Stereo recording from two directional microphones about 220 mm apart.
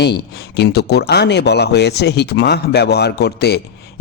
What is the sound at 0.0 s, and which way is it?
Speech, 50° left (ahead or behind).